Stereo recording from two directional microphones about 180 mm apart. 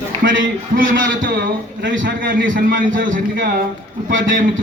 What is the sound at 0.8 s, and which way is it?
A man's voice, 50° right (ahead or behind).